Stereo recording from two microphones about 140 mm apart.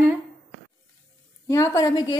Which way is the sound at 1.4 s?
20° left (ahead or behind).